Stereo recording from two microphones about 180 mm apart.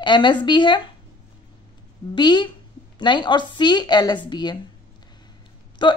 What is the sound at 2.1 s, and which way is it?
Speech, 25° left (ahead or behind).